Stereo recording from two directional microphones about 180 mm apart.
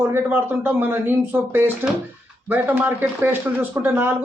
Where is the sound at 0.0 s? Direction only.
10° right (ahead or behind).